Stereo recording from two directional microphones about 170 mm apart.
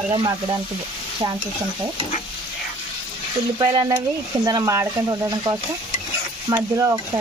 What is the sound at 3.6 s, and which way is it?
Speech, 25° right (ahead or behind).